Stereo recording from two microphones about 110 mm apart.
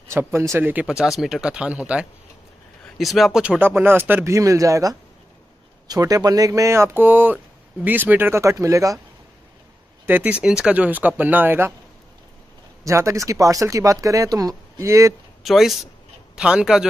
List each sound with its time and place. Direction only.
0.1 s speech: 25° right (ahead or behind)
0.8 s speech: 5° right (ahead or behind)
3.0 s speech: centre (ahead or behind)
3.4 s speech: 15° right (ahead or behind)
10.0 s speech: 15° right (ahead or behind)
12.8 s speech: 30° right (ahead or behind)
15.4 s speech: centre (ahead or behind)